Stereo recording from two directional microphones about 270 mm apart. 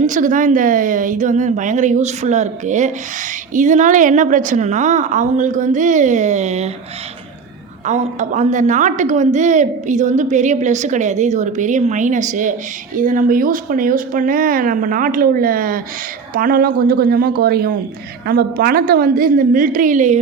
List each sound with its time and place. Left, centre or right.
0.0 s a woman's voice: right
7.9 s a woman's voice: right